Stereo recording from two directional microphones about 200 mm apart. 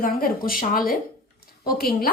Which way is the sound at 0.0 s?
45° left (ahead or behind).